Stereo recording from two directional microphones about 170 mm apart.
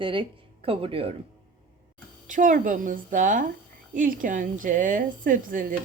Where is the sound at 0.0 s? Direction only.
30° right (ahead or behind).